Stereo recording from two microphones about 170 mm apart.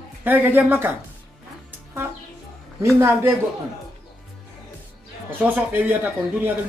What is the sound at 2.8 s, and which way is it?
Speech, 15° right (ahead or behind).